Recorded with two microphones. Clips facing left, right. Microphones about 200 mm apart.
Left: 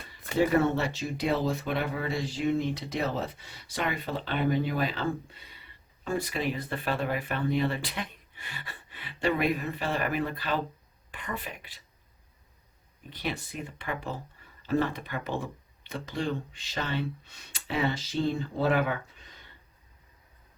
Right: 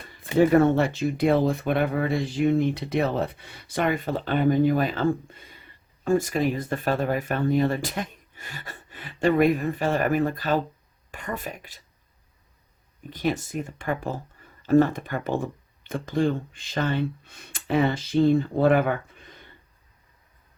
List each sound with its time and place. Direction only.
0.3 s speech: 50° right (ahead or behind)
13.1 s speech: 45° right (ahead or behind)